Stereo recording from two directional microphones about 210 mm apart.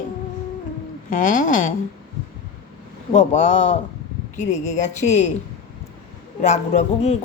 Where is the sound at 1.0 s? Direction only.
40° left (ahead or behind).